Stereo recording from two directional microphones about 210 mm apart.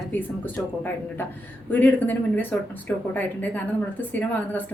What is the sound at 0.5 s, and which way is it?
A woman's voice, 5° left (ahead or behind).